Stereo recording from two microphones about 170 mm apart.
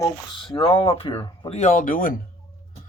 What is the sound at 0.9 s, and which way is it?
Speech, 35° left (ahead or behind).